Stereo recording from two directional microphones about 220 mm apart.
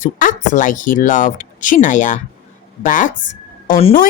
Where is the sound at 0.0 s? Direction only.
35° left (ahead or behind).